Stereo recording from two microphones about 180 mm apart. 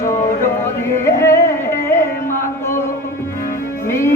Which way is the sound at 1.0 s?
15° left (ahead or behind).